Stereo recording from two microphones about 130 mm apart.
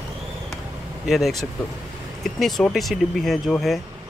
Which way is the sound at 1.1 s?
Centre (ahead or behind).